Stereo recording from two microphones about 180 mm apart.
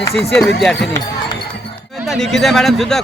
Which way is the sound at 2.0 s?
Centre (ahead or behind).